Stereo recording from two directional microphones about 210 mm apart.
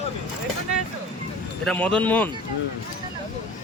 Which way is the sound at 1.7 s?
5° left (ahead or behind).